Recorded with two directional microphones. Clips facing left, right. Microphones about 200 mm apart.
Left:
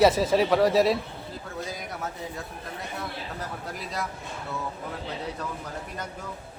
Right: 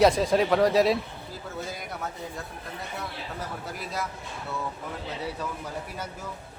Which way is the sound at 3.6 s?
Centre (ahead or behind).